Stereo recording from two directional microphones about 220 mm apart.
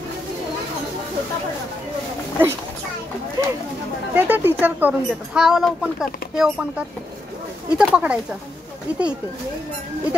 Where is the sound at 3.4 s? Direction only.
15° right (ahead or behind).